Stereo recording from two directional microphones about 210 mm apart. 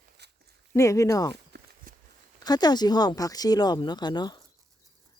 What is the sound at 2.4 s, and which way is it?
Speech, 20° left (ahead or behind).